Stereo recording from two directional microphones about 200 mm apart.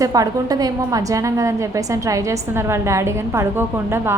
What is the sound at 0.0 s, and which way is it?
A woman's voice, 20° right (ahead or behind).